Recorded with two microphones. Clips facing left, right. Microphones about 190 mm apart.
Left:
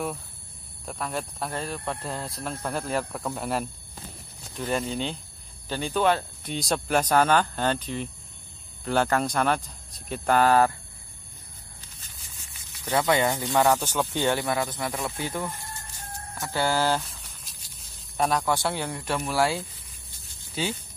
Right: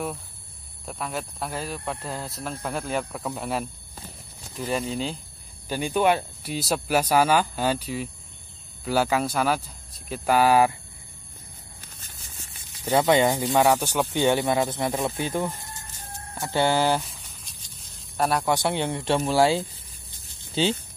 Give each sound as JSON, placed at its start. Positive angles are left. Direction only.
{"t": 0.8, "sound": "speech", "side_deg": 0}
{"t": 5.7, "sound": "speech", "side_deg": -15}
{"t": 12.0, "sound": "a sound", "side_deg": -45}
{"t": 12.9, "sound": "speech", "side_deg": -25}
{"t": 17.3, "sound": "snake", "side_deg": 0}
{"t": 18.4, "sound": "speech", "side_deg": -20}